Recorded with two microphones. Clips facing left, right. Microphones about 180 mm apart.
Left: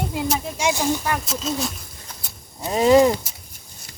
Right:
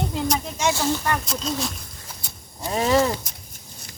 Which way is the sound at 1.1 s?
5° left (ahead or behind).